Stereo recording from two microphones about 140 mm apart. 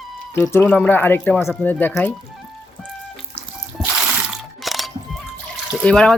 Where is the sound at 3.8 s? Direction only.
5° right (ahead or behind).